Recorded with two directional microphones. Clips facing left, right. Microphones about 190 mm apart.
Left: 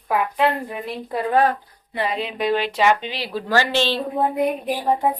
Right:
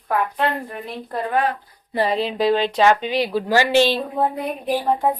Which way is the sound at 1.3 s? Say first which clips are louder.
Left 3 dB; 40° left (ahead or behind).